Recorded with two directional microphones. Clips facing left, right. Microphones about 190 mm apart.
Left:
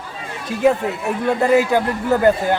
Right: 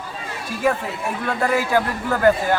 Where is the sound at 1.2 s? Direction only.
20° left (ahead or behind).